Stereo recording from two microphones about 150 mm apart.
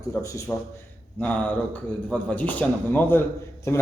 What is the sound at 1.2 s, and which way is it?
A man's voice, 10° left (ahead or behind).